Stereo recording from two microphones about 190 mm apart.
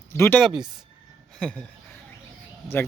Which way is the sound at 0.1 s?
10° left (ahead or behind).